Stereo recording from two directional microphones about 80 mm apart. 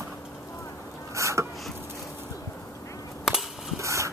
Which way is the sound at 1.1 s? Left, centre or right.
Right.